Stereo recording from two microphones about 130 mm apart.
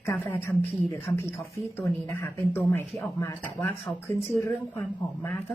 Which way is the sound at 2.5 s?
15° left (ahead or behind).